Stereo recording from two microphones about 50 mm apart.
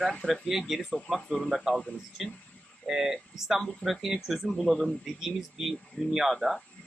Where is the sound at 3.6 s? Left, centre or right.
Centre.